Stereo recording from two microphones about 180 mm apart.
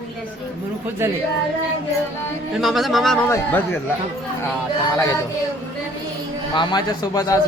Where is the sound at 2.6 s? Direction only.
Centre (ahead or behind).